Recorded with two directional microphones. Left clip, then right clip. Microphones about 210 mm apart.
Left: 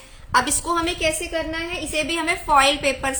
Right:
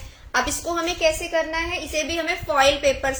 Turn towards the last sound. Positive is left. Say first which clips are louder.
# even
turn(degrees=40)  # may be behind; listen again after turning